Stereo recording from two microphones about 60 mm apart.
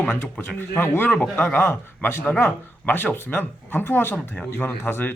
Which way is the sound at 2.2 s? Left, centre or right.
Left.